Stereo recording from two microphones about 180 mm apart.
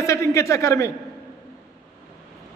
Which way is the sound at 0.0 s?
15° left (ahead or behind).